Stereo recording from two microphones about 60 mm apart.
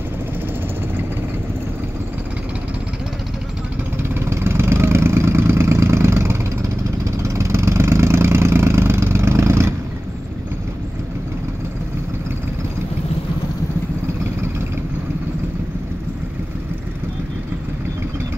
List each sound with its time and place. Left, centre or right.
4.1 s vehicle: right